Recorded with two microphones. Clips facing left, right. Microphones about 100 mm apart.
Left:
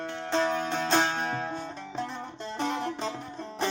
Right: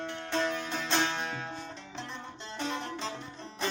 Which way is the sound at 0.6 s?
45° left (ahead or behind).